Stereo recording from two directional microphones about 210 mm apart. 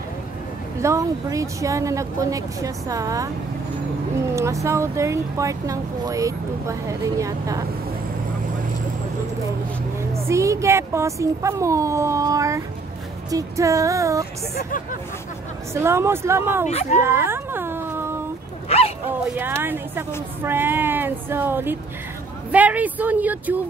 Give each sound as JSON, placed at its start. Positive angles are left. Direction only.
{"t": 0.7, "sound": "speech", "side_deg": -15}
{"t": 4.4, "sound": "speech", "side_deg": -15}
{"t": 10.1, "sound": "speech", "side_deg": -15}
{"t": 14.5, "sound": "speech", "side_deg": 40}
{"t": 15.7, "sound": "speech", "side_deg": -10}
{"t": 16.6, "sound": "speech", "side_deg": 35}
{"t": 17.0, "sound": "cat", "side_deg": -10}
{"t": 19.0, "sound": "speech", "side_deg": -10}